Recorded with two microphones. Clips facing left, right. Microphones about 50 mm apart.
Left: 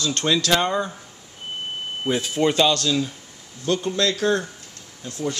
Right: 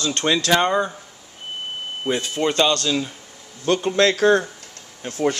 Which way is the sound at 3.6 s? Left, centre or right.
Right.